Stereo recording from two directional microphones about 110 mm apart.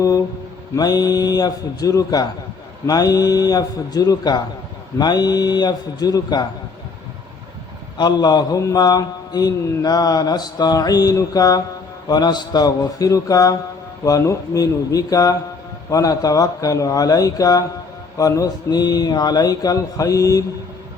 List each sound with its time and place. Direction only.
0.8 s a man's voice: 35° left (ahead or behind)
7.9 s a man's voice: 40° left (ahead or behind)